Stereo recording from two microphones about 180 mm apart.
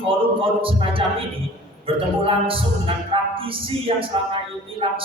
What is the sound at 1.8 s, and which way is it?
A man's voice, 30° right (ahead or behind).